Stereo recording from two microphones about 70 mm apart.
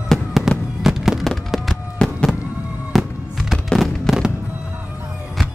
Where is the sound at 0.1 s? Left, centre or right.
Centre.